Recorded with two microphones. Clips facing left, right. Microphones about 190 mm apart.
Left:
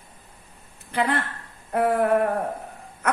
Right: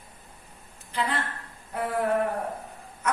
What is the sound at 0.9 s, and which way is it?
Speech, 60° left (ahead or behind).